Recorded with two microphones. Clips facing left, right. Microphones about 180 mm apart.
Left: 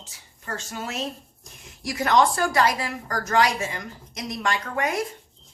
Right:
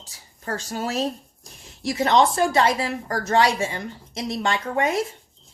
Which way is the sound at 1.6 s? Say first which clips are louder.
Right 4 dB; 25° right (ahead or behind).